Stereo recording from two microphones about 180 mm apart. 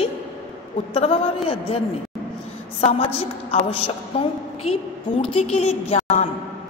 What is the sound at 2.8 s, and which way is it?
A woman's voice, 35° left (ahead or behind).